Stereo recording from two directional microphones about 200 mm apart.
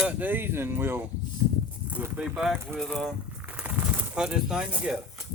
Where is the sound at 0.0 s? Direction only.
10° right (ahead or behind).